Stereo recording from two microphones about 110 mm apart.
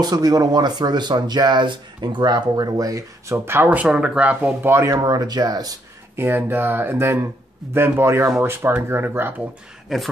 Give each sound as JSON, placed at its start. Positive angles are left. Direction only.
{"t": 0.0, "sound": "speech", "side_deg": -35}
{"t": 5.0, "sound": "speech", "side_deg": -40}
{"t": 6.1, "sound": "speech", "side_deg": -20}
{"t": 9.9, "sound": "speech", "side_deg": 0}